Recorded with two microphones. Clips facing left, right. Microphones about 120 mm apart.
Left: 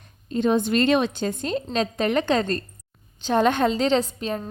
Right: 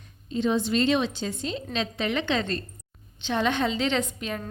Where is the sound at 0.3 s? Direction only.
50° left (ahead or behind).